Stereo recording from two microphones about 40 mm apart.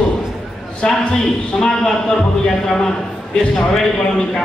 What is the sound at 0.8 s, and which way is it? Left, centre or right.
A man's voice, left.